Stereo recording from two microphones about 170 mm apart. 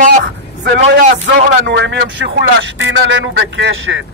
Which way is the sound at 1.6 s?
85° right.